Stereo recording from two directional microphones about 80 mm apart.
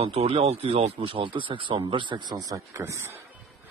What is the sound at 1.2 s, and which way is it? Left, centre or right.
Speech, right.